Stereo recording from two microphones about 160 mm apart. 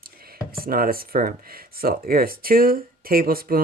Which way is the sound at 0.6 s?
65° right (ahead or behind).